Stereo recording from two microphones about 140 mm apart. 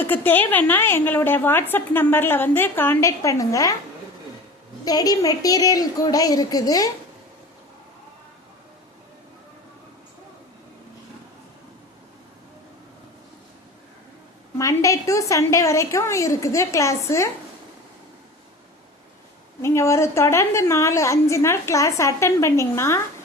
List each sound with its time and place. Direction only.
0.1 s a woman's voice: 15° left (ahead or behind)
4.9 s a woman's voice: 25° left (ahead or behind)
14.6 s a woman's voice: 20° left (ahead or behind)
19.6 s a woman's voice: 20° left (ahead or behind)